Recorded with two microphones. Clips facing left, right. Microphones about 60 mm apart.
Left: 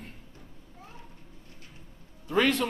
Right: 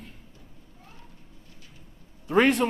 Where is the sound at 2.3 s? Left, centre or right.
Right.